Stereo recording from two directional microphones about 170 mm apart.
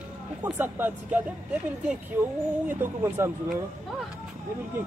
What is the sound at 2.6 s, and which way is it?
Speech, 15° right (ahead or behind).